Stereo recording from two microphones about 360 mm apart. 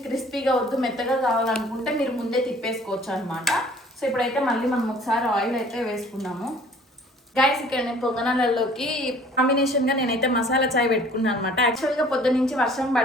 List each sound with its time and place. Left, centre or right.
0.1 s a woman's voice: centre
9.8 s a woman's voice: left
10.8 s a woman's voice: centre